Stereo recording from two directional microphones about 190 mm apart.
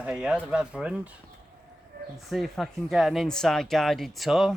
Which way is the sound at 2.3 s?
Centre (ahead or behind).